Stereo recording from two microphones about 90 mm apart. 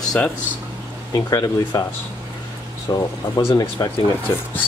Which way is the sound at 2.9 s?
40° left (ahead or behind).